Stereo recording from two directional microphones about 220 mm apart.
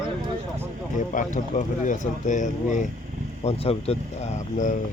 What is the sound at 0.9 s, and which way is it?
Speech, 35° left (ahead or behind).